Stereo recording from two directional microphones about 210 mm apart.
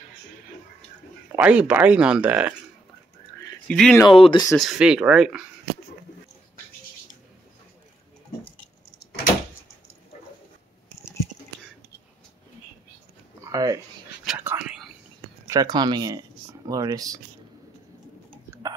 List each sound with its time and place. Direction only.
1.3 s speech: 5° right (ahead or behind)
3.6 s speech: 5° left (ahead or behind)
4.1 s speech: 25° left (ahead or behind)
4.6 s speech: centre (ahead or behind)
13.4 s a sound: 15° right (ahead or behind)
14.2 s whispering: 5° right (ahead or behind)
15.4 s speech: 15° right (ahead or behind)